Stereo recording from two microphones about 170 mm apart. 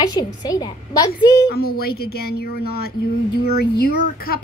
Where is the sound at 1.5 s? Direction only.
65° left (ahead or behind).